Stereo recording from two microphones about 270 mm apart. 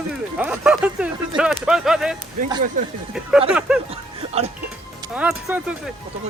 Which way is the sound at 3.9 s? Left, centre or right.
Right.